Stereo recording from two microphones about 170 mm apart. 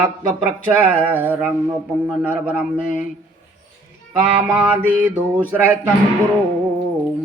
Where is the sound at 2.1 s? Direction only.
5° right (ahead or behind).